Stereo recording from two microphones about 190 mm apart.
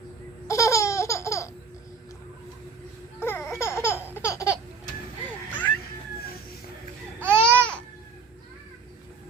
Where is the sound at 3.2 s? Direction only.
10° left (ahead or behind).